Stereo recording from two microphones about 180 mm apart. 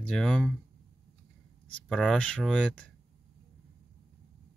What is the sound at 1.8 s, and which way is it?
Speech, 5° left (ahead or behind).